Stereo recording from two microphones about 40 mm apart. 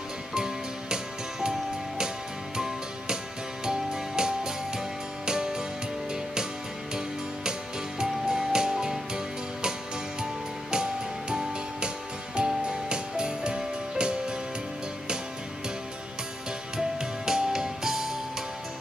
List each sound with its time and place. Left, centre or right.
0.3 s music: centre
2.5 s music: centre
8.0 s music: centre
16.7 s music: centre